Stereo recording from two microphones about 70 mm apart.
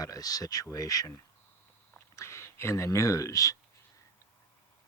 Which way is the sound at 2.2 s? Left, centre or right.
Left.